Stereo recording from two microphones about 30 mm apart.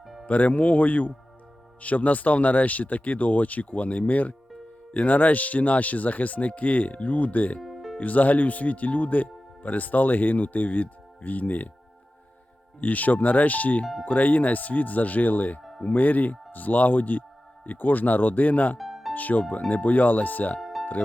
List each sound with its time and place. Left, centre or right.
0.3 s speech: left
7.6 s music: centre
7.9 s speech: left
12.8 s speech: left
17.7 s speech: left
18.8 s music: centre
19.1 s speech: left
20.6 s music: centre